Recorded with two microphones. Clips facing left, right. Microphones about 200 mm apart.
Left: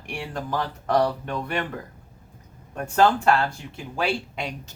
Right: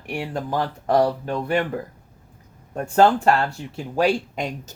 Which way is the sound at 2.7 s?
30° right (ahead or behind).